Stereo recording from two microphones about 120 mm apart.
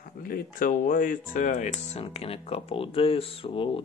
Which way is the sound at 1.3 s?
90° left.